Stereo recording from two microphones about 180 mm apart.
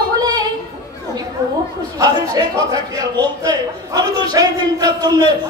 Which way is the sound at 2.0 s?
20° right (ahead or behind).